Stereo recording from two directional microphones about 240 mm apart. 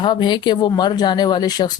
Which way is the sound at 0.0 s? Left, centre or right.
Centre.